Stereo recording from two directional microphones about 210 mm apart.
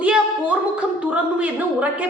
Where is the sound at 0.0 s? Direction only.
5° right (ahead or behind).